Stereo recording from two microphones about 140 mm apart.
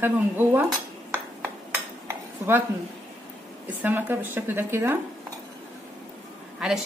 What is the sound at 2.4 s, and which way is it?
Speech, 15° right (ahead or behind).